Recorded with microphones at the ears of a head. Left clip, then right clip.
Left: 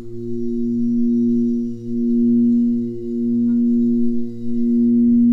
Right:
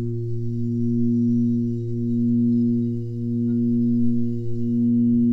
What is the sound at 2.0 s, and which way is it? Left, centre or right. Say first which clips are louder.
Singing bowl: left 6 dB; left.